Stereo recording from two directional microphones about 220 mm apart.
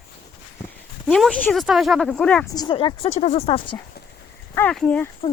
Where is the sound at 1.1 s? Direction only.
Centre (ahead or behind).